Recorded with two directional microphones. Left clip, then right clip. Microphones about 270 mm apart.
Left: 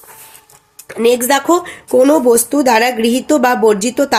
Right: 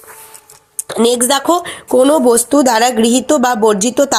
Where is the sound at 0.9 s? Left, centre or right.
Centre.